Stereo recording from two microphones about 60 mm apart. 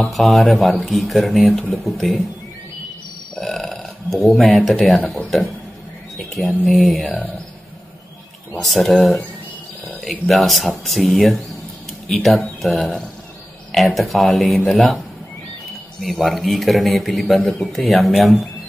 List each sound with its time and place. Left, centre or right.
0.1 s a man's voice: centre
1.4 s speech: centre
1.7 s a man's voice: centre
3.3 s burping: centre
4.4 s a man's voice: centre
7.1 s speech: left
8.5 s a man's voice: centre
16.0 s a man's voice: centre